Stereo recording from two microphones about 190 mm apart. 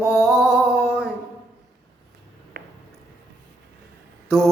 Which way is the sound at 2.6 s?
55° right (ahead or behind).